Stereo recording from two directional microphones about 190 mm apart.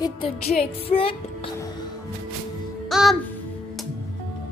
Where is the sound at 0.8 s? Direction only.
30° left (ahead or behind).